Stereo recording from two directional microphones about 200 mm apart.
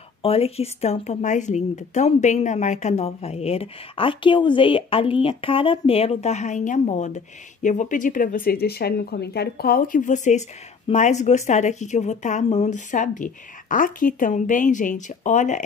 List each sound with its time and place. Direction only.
0.2 s a woman's voice: 30° left (ahead or behind)